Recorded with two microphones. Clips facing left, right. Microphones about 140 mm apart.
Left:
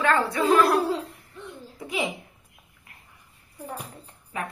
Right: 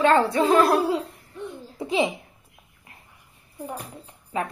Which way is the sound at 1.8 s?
25° right (ahead or behind).